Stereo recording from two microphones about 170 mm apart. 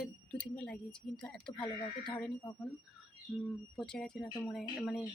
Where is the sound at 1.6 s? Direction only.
30° left (ahead or behind).